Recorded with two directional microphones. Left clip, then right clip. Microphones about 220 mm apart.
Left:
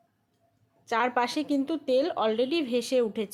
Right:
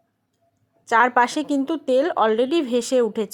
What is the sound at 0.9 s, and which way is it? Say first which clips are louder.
Speech: right 9 dB; 25° right (ahead or behind).